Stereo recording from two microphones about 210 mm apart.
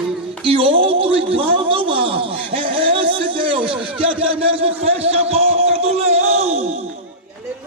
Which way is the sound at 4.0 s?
25° right (ahead or behind).